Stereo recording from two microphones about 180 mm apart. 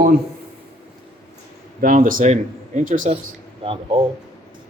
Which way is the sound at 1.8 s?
50° right (ahead or behind).